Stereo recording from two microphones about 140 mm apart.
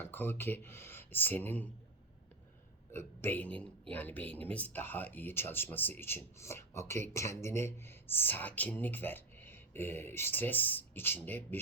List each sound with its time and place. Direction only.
0.0 s speech: 15° left (ahead or behind)
2.9 s a man's voice: 15° left (ahead or behind)